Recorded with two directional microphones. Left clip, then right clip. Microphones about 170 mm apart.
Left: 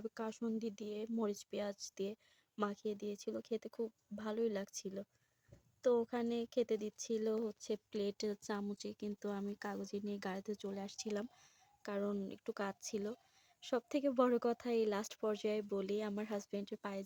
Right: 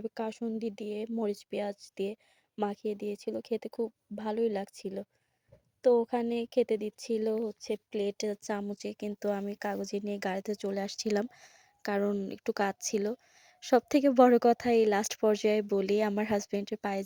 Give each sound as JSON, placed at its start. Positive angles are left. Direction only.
{"t": 0.0, "sound": "speech", "side_deg": -20}